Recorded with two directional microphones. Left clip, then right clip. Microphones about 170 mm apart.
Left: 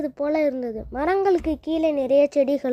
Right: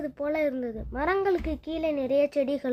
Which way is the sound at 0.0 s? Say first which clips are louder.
Left 5 dB; 30° left (ahead or behind).